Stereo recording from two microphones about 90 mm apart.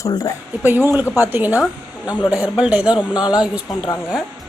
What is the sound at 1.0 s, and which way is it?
Speech, 35° left (ahead or behind).